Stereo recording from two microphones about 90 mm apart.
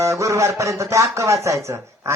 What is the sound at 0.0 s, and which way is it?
Speech, 35° right (ahead or behind).